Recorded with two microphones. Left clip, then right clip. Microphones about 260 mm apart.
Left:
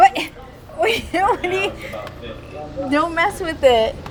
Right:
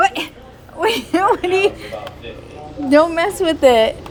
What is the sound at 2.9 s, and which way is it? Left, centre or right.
A woman's voice, centre.